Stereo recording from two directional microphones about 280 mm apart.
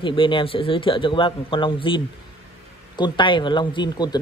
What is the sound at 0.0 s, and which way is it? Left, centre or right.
Speech, centre.